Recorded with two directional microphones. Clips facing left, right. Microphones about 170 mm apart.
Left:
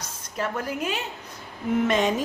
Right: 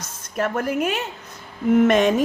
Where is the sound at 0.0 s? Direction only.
50° right (ahead or behind).